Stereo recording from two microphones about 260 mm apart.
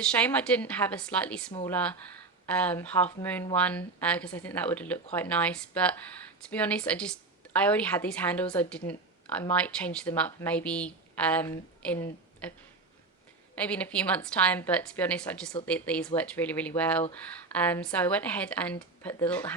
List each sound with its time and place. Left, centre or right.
0.0 s speech: centre
13.6 s speech: centre